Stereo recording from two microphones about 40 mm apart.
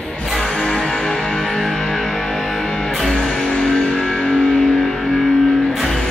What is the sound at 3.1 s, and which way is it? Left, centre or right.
Music, centre.